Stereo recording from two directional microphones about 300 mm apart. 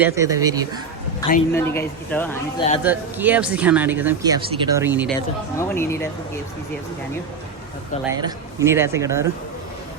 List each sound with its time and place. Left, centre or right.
0.0 s speech: centre
1.5 s speech: centre
2.6 s speech: centre
2.8 s speech: centre
5.5 s speech: centre
8.1 s speech: centre